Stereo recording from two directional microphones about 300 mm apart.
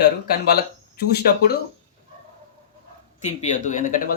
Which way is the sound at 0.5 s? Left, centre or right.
Left.